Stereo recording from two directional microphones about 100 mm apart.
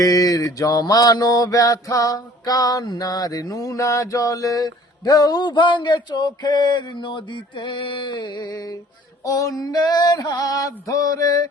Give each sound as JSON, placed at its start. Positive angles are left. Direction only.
{"t": 0.0, "sound": "mantra", "side_deg": 35}